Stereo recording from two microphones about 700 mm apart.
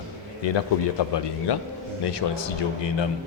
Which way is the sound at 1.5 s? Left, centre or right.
Left.